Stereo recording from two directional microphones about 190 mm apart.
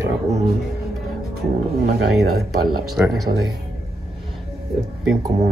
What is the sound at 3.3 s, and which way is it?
Speech, 35° right (ahead or behind).